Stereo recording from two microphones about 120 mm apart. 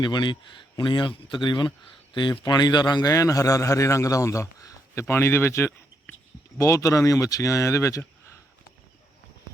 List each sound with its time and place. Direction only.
0.0 s a man's voice: 40° left (ahead or behind)